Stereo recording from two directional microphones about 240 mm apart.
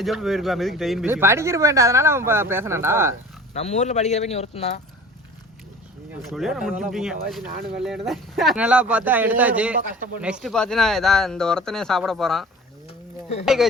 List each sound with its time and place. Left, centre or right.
0.0 s speech: centre
3.5 s speech: left
6.2 s speech: centre
9.7 s speech: right
10.2 s speech: centre